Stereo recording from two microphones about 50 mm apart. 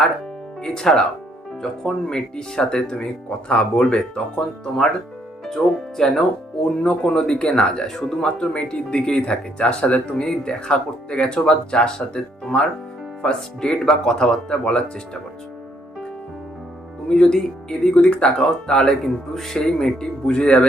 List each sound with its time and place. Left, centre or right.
0.6 s speech: centre
17.1 s speech: centre
18.0 s speech: left
18.4 s speech: centre